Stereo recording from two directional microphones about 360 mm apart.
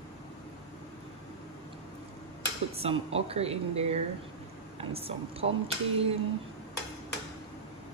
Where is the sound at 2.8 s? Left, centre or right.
Centre.